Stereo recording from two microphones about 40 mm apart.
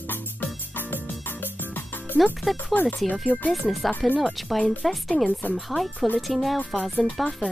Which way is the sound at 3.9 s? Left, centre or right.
Left.